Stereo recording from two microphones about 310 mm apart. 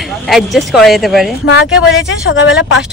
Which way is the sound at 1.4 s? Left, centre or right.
Left.